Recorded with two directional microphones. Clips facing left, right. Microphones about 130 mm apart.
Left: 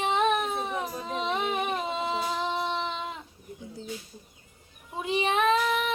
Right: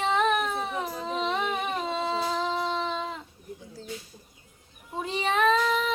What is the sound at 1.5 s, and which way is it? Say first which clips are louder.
Singing: even; 15° left (ahead or behind).